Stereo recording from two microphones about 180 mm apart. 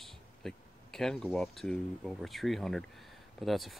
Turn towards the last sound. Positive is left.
turn(degrees=0)  # may be behind; listen again after turning